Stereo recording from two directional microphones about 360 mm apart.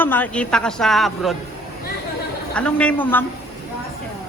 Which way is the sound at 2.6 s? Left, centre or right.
Centre.